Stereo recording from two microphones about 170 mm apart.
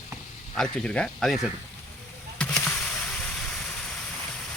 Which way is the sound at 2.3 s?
5° left (ahead or behind).